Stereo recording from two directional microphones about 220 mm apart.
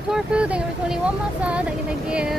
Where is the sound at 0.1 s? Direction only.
5° right (ahead or behind).